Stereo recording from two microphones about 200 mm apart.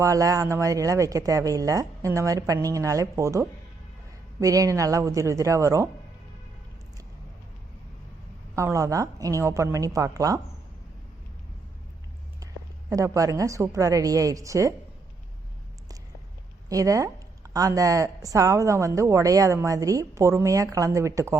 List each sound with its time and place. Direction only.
0.0 s speech: 15° right (ahead or behind)
8.5 s speech: 15° right (ahead or behind)
12.9 s speech: 15° right (ahead or behind)
16.6 s speech: 15° right (ahead or behind)